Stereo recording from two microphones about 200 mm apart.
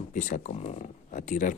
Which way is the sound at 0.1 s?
40° left (ahead or behind).